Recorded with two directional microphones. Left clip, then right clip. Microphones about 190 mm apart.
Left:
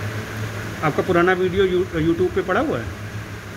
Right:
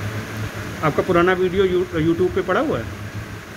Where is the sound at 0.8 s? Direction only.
5° right (ahead or behind).